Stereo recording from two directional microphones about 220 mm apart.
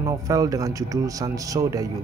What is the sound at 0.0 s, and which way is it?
Speech, 15° right (ahead or behind).